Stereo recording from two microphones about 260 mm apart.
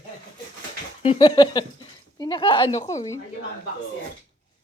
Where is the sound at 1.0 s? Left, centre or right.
Centre.